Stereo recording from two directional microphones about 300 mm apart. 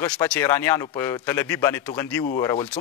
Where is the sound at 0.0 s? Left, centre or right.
Centre.